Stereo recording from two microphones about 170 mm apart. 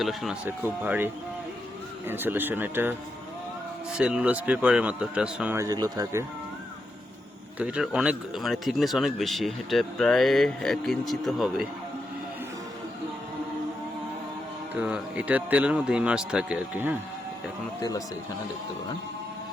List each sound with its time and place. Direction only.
0.0 s speech: centre (ahead or behind)
3.9 s speech: 5° right (ahead or behind)
5.5 s speech: 20° right (ahead or behind)
7.6 s speech: 5° right (ahead or behind)
14.8 s speech: 5° right (ahead or behind)